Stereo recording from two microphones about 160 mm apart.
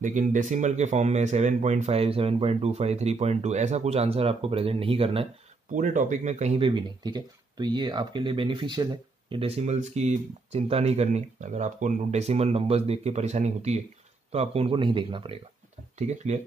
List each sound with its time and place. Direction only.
0.0 s speech: 55° right (ahead or behind); by 5.3 s 35° right (ahead or behind)
5.7 s speech: 50° right (ahead or behind); by 15.3 s 30° right (ahead or behind)
16.0 s speech: 45° right (ahead or behind)